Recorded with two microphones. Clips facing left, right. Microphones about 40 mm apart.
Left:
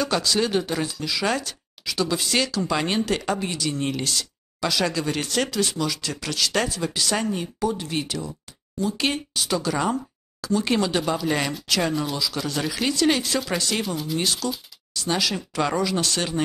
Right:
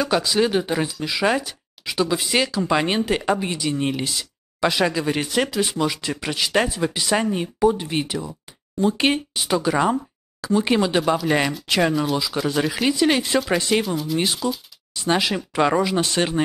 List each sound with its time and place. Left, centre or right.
0.0 s speech: centre
13.8 s speech: centre
14.1 s speech: centre